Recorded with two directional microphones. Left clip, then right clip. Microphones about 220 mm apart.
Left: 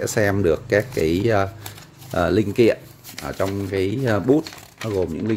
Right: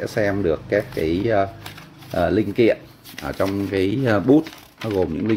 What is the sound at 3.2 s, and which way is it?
Speech, 5° left (ahead or behind).